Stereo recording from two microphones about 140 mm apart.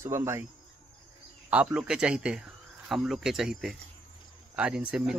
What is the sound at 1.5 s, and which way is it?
Speech, 10° right (ahead or behind).